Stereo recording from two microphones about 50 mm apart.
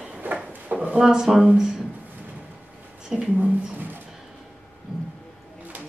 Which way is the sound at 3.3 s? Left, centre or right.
Right.